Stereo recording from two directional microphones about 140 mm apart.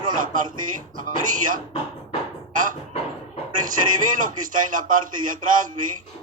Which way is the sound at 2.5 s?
70° right (ahead or behind).